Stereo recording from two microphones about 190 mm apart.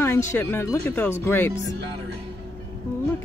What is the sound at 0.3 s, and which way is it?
Speech, 10° left (ahead or behind).